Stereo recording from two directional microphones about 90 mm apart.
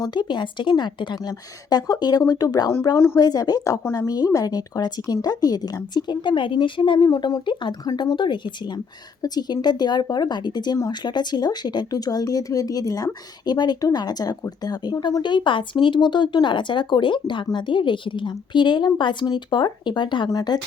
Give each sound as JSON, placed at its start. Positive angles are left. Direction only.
{"t": 0.0, "sound": "a woman's voice", "side_deg": 55}
{"t": 7.1, "sound": "a woman's voice", "side_deg": 45}
{"t": 15.2, "sound": "a woman's voice", "side_deg": 60}
{"t": 20.3, "sound": "speech", "side_deg": 50}